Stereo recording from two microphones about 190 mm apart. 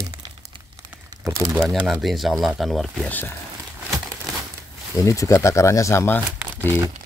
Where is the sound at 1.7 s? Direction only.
Centre (ahead or behind).